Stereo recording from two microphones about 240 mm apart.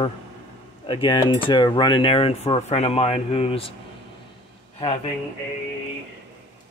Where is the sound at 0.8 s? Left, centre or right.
Centre.